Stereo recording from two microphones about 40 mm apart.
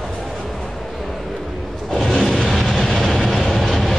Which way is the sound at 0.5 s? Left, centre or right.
Centre.